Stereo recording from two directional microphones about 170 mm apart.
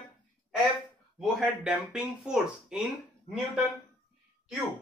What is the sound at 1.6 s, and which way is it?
Speech, 5° right (ahead or behind).